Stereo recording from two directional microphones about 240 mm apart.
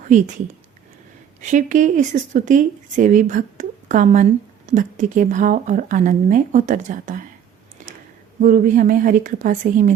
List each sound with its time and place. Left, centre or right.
0.0 s a woman's voice: right
1.4 s a woman's voice: right
7.8 s a sound: right
8.4 s a woman's voice: right